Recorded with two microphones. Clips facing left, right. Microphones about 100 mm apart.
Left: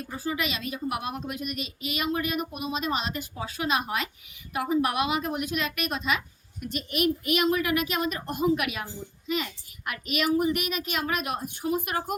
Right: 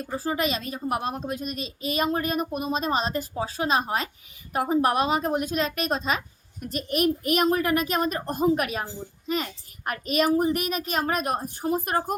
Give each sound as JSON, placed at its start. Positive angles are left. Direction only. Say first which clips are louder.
{"t": 0.0, "sound": "a woman's voice", "louder": "right 4 dB", "side_deg": -35}